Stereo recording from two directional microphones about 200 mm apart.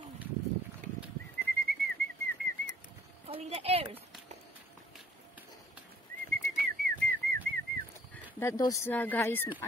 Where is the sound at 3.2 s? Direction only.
30° right (ahead or behind).